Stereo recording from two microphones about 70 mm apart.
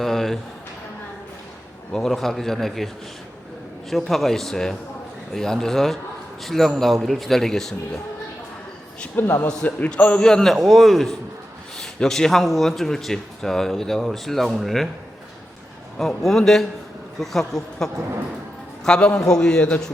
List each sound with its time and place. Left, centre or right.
0.0 s music: centre
1.9 s speech: centre
9.1 s a man's voice: left
9.6 s a man's voice: centre
10.2 s speech: centre
16.0 s a man's voice: centre